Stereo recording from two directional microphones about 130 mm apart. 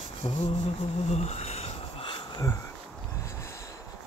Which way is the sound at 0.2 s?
35° left (ahead or behind).